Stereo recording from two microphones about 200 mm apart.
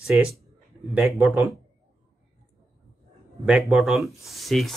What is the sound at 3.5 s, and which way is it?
Speech, 5° right (ahead or behind).